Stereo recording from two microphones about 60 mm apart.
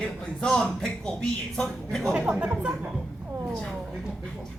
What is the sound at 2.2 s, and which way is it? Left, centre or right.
Speech, centre.